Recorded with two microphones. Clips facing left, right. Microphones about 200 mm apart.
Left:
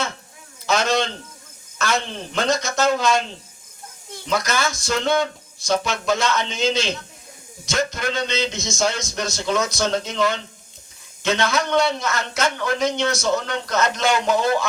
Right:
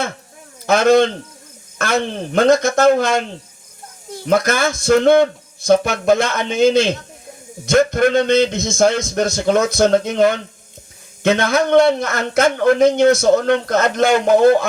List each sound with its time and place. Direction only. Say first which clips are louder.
0.7 s a man's voice: right 9 dB; 55° right (ahead or behind)
4.3 s a man's voice: right 7 dB; 55° right (ahead or behind)